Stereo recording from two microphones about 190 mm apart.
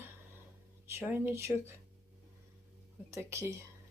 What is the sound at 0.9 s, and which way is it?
Speech, 15° right (ahead or behind).